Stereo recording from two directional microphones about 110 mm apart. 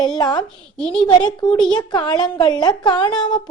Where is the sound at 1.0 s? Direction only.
45° left (ahead or behind).